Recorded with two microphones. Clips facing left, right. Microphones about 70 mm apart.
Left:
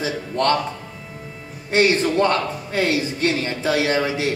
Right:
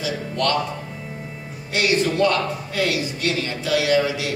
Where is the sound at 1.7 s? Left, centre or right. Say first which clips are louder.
Left 3 dB; left.